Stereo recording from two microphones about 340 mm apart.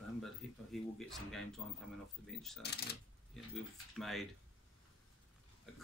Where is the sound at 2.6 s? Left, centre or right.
Left.